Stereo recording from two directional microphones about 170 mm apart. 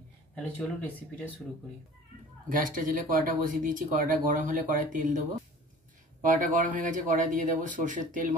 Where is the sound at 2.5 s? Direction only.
50° right (ahead or behind).